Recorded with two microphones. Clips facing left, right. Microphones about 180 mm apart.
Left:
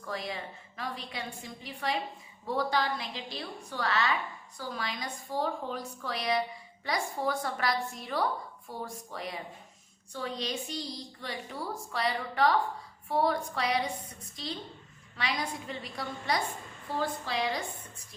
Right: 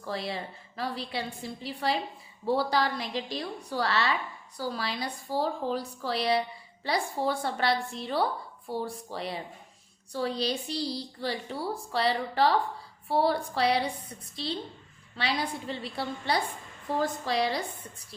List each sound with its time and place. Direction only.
0.0 s a woman's voice: 30° right (ahead or behind)